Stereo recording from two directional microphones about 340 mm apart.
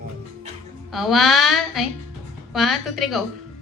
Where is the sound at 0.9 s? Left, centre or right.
Centre.